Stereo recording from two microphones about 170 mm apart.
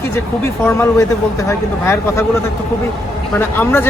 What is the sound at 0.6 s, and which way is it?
A man's voice, 15° left (ahead or behind).